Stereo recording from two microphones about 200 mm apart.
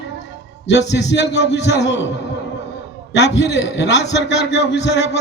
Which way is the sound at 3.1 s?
60° left (ahead or behind).